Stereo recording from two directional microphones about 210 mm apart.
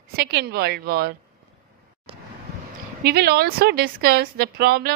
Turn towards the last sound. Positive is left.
turn(degrees=-45)  # may be behind; listen again after turning